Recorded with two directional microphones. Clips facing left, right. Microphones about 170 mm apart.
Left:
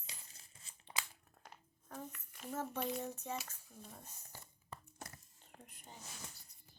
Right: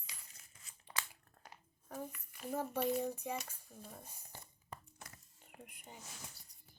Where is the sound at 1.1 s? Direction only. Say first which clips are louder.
Even; 10° right (ahead or behind).